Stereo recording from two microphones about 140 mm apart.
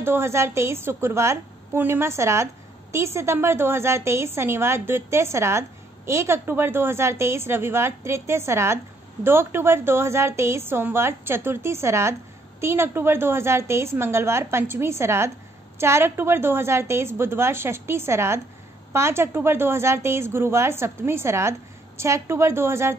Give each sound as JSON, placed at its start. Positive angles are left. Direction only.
{"t": 0.0, "sound": "a woman's voice", "side_deg": -15}